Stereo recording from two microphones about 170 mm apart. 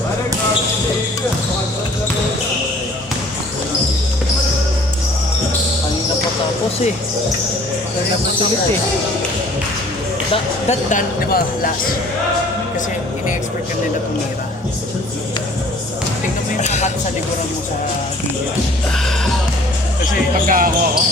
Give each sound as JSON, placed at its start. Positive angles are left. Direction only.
{"t": 10.7, "sound": "speech", "side_deg": 55}
{"t": 16.6, "sound": "music", "side_deg": 45}
{"t": 20.5, "sound": "speech", "side_deg": -55}